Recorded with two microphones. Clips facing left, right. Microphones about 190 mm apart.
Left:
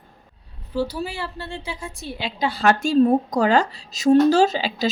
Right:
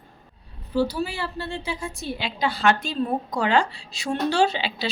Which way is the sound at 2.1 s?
40° left (ahead or behind).